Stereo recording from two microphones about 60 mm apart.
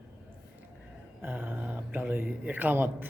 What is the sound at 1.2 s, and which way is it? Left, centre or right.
Speech, right.